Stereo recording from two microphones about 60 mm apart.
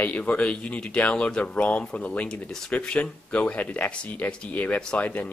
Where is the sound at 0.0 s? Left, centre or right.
Left.